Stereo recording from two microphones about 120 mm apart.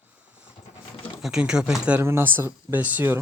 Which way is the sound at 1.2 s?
5° right (ahead or behind).